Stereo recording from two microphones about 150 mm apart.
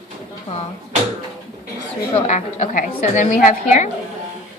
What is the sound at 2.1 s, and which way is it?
A woman's voice, 50° left (ahead or behind).